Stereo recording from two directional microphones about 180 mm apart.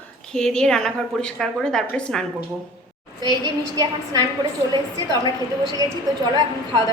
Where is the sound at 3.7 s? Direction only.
20° right (ahead or behind).